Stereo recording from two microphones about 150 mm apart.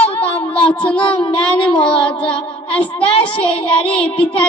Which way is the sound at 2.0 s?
5° left (ahead or behind).